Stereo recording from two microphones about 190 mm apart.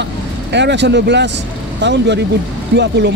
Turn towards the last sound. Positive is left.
turn(degrees=-65)  # may be behind; listen again after turning